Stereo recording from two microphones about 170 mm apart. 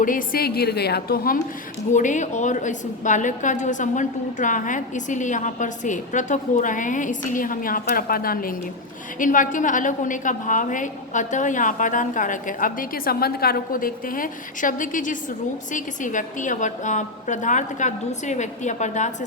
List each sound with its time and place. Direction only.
0.0 s a woman's voice: 55° left (ahead or behind)
1.9 s a woman's voice: 45° left (ahead or behind)